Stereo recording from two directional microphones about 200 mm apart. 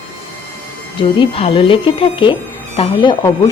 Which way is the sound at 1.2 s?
25° left (ahead or behind).